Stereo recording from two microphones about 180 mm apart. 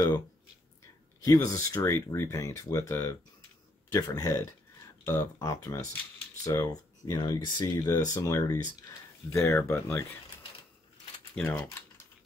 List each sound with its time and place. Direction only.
1.2 s speech: 20° left (ahead or behind)
11.3 s speech: 10° left (ahead or behind)